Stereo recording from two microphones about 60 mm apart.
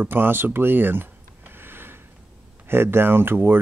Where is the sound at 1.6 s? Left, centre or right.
Right.